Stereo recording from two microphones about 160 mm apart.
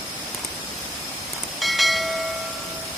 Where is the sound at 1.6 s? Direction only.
Centre (ahead or behind).